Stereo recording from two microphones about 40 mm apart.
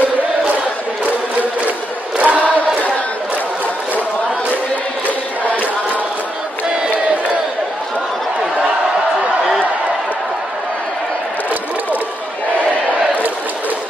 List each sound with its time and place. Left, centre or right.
2.1 s chant: right
5.0 s chant: left